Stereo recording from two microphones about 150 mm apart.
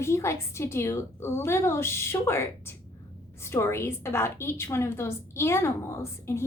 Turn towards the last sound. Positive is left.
turn(degrees=15)  # may be behind; listen again after turning